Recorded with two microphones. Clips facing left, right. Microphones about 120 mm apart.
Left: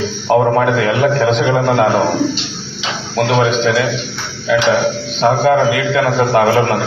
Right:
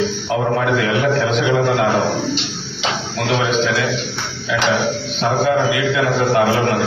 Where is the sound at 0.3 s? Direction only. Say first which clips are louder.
Left 7 dB; 45° left (ahead or behind).